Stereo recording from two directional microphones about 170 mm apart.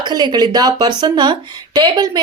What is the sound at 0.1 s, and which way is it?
Speech, 25° right (ahead or behind).